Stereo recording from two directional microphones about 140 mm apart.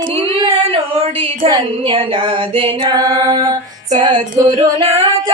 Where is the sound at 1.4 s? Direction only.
35° right (ahead or behind).